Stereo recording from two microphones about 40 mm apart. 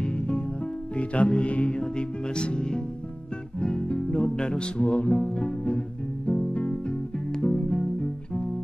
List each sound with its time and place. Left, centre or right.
0.9 s music: left